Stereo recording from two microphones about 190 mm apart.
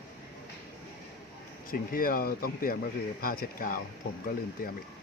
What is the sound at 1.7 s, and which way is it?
Speech, 50° left (ahead or behind).